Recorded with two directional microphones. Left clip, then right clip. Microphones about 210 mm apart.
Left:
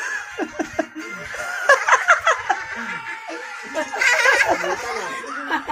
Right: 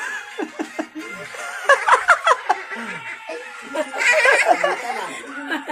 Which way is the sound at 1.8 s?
20° right (ahead or behind).